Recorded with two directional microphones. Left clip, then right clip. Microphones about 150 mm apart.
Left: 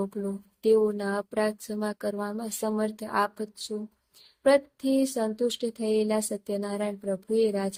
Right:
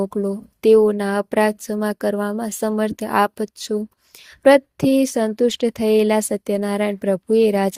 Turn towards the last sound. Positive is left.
turn(degrees=-50)  # may be behind; listen again after turning